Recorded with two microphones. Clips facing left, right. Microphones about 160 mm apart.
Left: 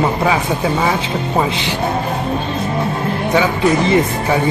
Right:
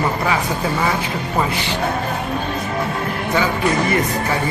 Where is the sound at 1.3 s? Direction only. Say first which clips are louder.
Left 3 dB; 20° left (ahead or behind).